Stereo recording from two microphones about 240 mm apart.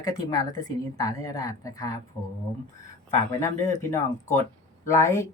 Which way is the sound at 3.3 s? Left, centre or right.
Centre.